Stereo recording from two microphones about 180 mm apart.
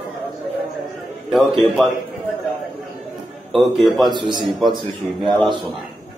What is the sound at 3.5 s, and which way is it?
Speech, centre (ahead or behind).